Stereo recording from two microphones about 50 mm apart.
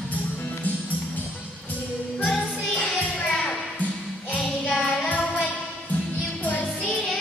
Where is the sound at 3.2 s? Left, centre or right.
Centre.